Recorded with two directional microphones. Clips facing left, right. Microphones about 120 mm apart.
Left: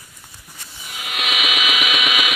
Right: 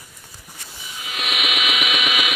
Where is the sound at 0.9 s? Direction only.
70° left (ahead or behind); by 2.3 s 90° left.